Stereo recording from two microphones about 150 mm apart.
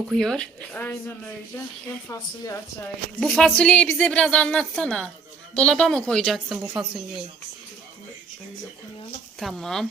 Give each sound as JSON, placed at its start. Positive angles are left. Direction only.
{"t": 0.1, "sound": "a woman's voice", "side_deg": 5}
{"t": 3.2, "sound": "a woman's voice", "side_deg": 5}
{"t": 9.4, "sound": "speech", "side_deg": 0}